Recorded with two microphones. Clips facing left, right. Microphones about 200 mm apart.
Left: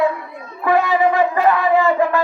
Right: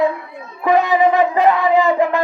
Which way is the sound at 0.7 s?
20° right (ahead or behind).